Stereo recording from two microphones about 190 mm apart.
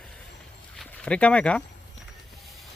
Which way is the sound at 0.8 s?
5° left (ahead or behind).